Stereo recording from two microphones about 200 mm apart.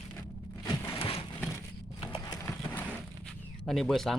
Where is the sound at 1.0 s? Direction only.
30° left (ahead or behind).